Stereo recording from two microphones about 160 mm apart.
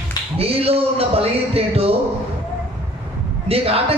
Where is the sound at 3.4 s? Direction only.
40° right (ahead or behind).